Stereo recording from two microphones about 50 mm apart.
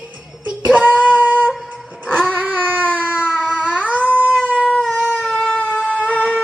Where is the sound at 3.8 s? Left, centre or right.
Right.